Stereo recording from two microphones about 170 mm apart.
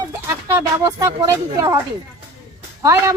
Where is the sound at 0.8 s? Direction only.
20° right (ahead or behind).